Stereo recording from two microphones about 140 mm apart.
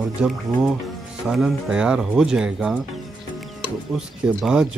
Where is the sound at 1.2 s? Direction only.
5° right (ahead or behind).